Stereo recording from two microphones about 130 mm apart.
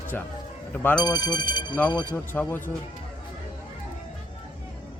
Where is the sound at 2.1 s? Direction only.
15° left (ahead or behind).